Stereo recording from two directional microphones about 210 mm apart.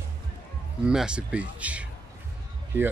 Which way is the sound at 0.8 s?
5° right (ahead or behind).